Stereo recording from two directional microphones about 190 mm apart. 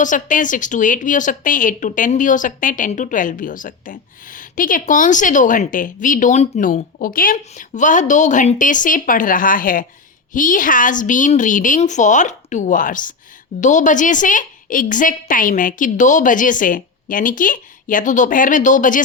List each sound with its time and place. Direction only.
0.0 s a woman's voice: 45° left (ahead or behind)